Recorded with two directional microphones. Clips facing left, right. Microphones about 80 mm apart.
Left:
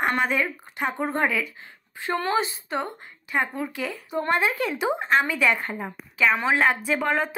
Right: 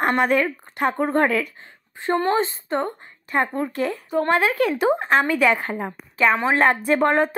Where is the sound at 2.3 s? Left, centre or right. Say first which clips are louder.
Right 4 dB; right.